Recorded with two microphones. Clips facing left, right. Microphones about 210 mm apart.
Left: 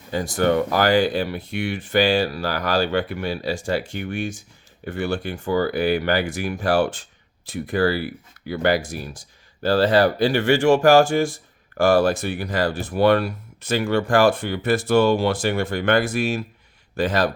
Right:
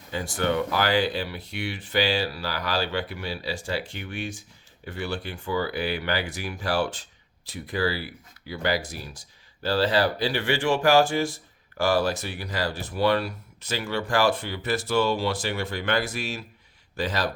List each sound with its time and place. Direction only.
0.1 s speech: 40° left (ahead or behind)